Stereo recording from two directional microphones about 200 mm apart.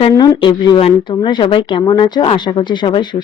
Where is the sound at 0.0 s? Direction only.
25° left (ahead or behind).